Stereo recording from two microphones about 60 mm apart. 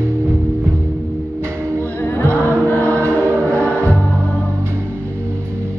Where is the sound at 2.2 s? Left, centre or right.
Right.